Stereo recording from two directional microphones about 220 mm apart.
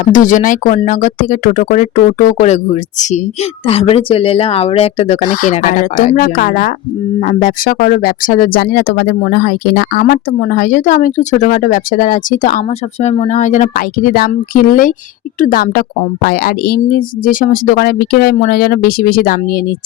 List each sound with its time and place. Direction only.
0.0 s a woman's voice: 35° left (ahead or behind)